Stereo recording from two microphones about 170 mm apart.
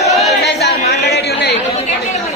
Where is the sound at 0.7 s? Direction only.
75° left (ahead or behind).